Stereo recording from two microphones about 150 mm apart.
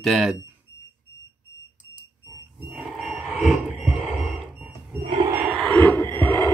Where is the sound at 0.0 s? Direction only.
Centre (ahead or behind).